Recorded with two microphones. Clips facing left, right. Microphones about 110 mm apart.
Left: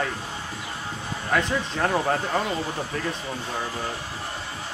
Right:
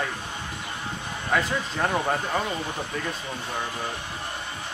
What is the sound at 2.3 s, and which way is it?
Speech, 10° left (ahead or behind).